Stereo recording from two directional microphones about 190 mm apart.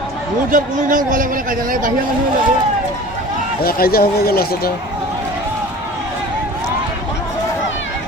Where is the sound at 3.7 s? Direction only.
50° left (ahead or behind).